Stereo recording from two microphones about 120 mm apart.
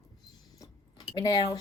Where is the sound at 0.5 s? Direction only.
35° left (ahead or behind).